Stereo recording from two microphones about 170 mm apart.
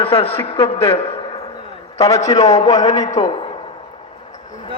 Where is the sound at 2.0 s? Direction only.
40° left (ahead or behind).